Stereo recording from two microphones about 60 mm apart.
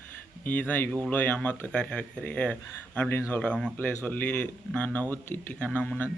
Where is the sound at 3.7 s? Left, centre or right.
Left.